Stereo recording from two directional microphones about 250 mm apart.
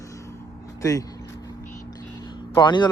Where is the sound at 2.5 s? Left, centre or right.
Centre.